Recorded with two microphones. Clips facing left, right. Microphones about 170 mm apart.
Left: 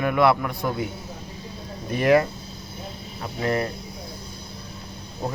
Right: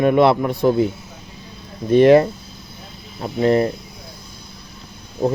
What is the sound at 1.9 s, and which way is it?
A man's voice, 30° right (ahead or behind).